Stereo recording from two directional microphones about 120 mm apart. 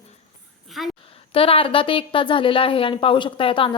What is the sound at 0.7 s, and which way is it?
Speech, centre (ahead or behind).